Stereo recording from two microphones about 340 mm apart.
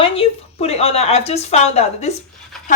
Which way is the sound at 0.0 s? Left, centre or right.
Centre.